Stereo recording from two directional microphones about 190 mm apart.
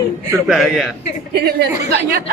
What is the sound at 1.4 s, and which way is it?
Speech, 60° right (ahead or behind).